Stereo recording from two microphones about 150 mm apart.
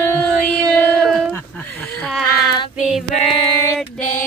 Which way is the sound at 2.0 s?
Centre (ahead or behind).